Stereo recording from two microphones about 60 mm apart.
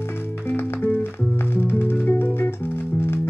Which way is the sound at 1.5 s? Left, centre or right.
Left.